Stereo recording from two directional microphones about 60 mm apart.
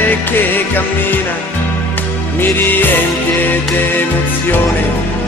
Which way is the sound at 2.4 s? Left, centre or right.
Left.